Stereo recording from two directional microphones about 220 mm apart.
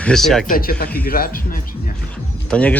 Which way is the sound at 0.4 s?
40° left (ahead or behind).